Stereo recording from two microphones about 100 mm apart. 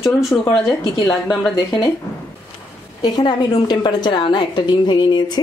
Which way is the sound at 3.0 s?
45° left (ahead or behind).